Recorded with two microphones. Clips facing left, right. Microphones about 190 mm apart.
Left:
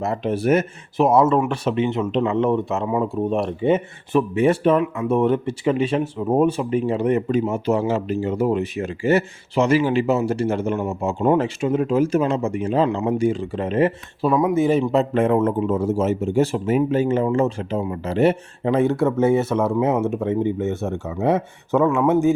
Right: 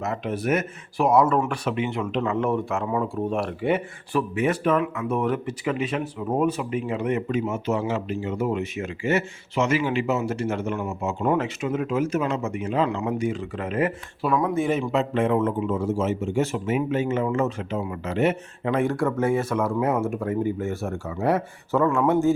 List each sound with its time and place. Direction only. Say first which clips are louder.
0.0 s speech: left 5 dB; 30° left (ahead or behind)
15.1 s a man's voice: left 4 dB; 45° left (ahead or behind); by 22.4 s 20° left (ahead or behind)